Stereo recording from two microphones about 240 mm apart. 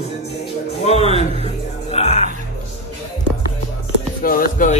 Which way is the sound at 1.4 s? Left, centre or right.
Left.